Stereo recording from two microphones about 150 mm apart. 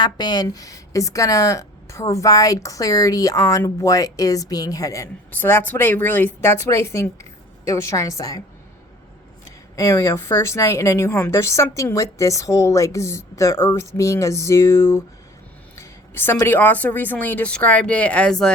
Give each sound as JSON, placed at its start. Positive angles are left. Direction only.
{"t": 0.0, "sound": "speech", "side_deg": 30}
{"t": 9.7, "sound": "a woman's voice", "side_deg": 20}